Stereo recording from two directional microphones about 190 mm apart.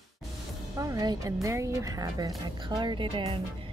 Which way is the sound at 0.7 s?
20° right (ahead or behind).